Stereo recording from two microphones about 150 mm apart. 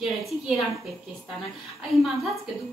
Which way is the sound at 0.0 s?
Centre (ahead or behind).